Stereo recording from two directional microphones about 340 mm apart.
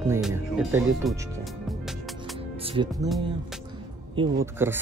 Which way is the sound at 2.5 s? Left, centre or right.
Centre.